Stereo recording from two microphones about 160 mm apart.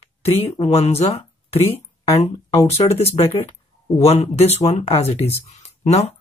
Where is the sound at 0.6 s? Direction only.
40° left (ahead or behind).